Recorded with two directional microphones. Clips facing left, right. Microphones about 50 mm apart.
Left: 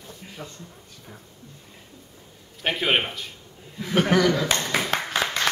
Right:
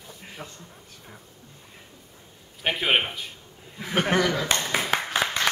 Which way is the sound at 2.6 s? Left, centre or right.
Centre.